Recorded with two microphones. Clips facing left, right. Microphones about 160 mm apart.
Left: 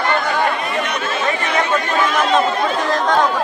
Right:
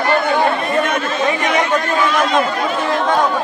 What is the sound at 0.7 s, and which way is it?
Chatter, 50° right (ahead or behind).